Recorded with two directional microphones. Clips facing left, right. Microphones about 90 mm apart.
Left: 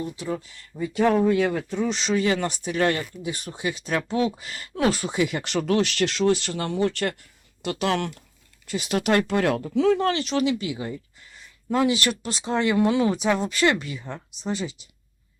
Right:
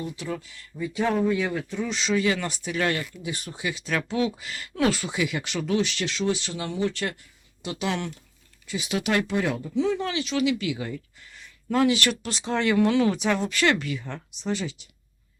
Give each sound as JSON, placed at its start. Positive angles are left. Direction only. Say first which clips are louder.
{"t": 0.3, "sound": "speech", "louder": "left 3 dB", "side_deg": 30}
{"t": 1.3, "sound": "speech", "louder": "left 4 dB", "side_deg": 50}
{"t": 2.1, "sound": "speech", "louder": "left 1 dB", "side_deg": 35}
{"t": 5.5, "sound": "speech", "louder": "left 3 dB", "side_deg": 60}
{"t": 10.4, "sound": "speech", "louder": "even", "side_deg": 30}
{"t": 13.2, "sound": "speech", "louder": "left 2 dB", "side_deg": 10}
{"t": 13.7, "sound": "speech", "louder": "even", "side_deg": 25}
{"t": 14.0, "sound": "speech", "louder": "left 1 dB", "side_deg": 10}